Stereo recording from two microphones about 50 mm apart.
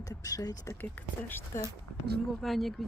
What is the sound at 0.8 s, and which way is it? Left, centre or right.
Speech, left.